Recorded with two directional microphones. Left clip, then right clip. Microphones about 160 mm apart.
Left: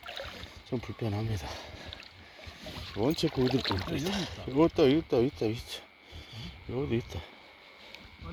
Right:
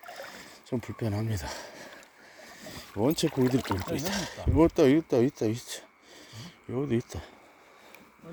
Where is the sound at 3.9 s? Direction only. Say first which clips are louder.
Right 2 dB; 40° right (ahead or behind).